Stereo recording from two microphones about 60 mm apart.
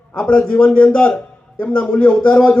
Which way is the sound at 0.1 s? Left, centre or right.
Left.